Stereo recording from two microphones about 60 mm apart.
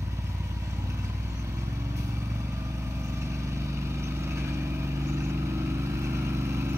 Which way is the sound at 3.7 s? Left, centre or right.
Right.